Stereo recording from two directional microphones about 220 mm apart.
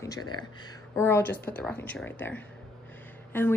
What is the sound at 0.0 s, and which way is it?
A woman's voice, 15° left (ahead or behind).